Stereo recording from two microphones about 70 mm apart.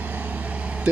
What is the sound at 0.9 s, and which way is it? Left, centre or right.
Speech, centre.